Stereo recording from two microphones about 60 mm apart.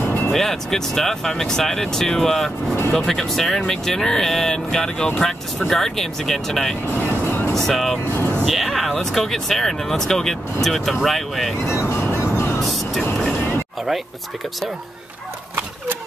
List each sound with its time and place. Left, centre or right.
0.0 s music: left
0.3 s speech: centre
7.2 s music: left
7.5 s speech: centre
8.1 s speech: left
8.5 s speech: centre
11.7 s speech: left
13.3 s a sound: left